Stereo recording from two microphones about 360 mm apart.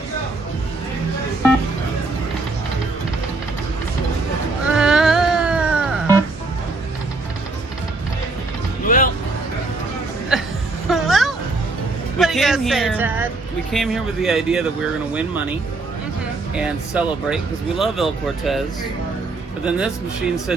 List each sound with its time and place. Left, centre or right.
4.7 s music: centre
8.8 s music: left
10.3 s a sound: centre
10.8 s music: centre
12.2 s a sound: centre
13.7 s speech: centre
16.6 s speech: centre
19.6 s speech: centre